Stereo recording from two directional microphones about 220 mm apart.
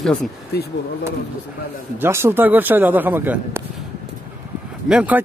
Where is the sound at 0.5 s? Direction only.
45° left (ahead or behind).